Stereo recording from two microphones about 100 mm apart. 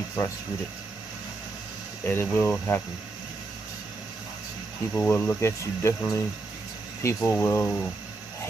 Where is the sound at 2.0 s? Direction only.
20° left (ahead or behind).